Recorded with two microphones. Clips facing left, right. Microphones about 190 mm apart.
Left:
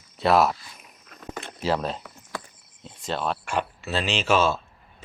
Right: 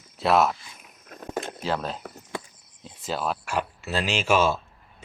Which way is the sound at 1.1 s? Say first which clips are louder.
Right 5 dB; 45° right (ahead or behind).